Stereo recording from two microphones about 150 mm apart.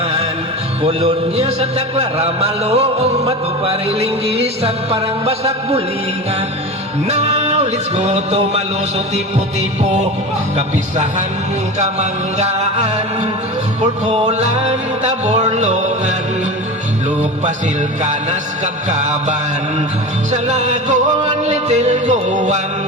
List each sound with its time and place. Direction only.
0.8 s music: 45° right (ahead or behind)
7.1 s music: 45° right (ahead or behind)
9.8 s music: 50° right (ahead or behind)
11.8 s music: 50° right (ahead or behind)
18.0 s music: 50° right (ahead or behind)